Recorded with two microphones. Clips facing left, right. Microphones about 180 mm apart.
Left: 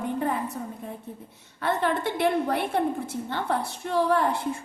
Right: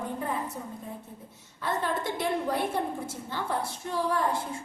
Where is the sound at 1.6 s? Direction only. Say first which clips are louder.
Left 4 dB; 65° left (ahead or behind).